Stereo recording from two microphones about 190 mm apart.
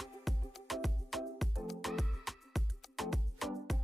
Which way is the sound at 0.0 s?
Centre (ahead or behind).